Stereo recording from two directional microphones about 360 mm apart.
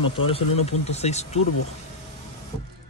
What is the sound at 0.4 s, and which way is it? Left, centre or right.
Speech, left.